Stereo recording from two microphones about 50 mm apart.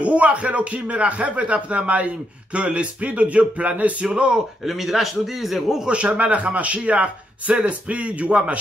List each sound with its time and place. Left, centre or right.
0.0 s speech: right
4.6 s a man's voice: centre
5.9 s speech: right